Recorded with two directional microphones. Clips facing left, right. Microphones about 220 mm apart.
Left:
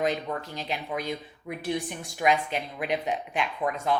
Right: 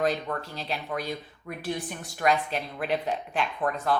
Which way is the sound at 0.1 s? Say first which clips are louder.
Even; 15° left (ahead or behind).